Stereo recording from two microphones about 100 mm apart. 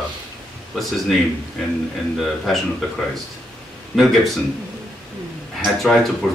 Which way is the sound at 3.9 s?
Centre (ahead or behind).